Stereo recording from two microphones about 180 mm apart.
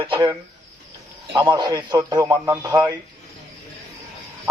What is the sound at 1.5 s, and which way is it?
Speech, 20° right (ahead or behind).